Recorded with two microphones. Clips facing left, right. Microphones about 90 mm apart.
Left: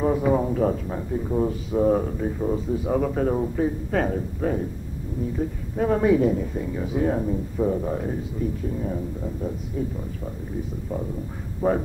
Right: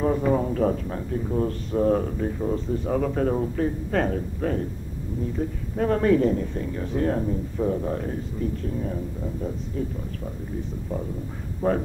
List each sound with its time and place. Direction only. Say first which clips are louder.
0.0 s speech: left 1 dB; 5° left (ahead or behind)
11.6 s speech: left 1 dB; 10° left (ahead or behind)